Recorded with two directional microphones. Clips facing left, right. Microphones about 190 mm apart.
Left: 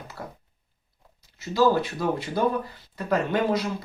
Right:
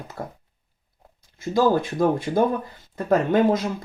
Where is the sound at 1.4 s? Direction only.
50° right (ahead or behind).